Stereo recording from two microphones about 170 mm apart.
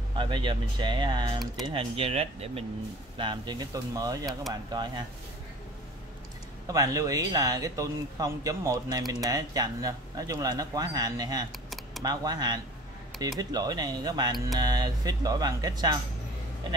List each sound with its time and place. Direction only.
0.2 s speech: 30° right (ahead or behind)
4.3 s speech: centre (ahead or behind)
6.7 s speech: 20° right (ahead or behind)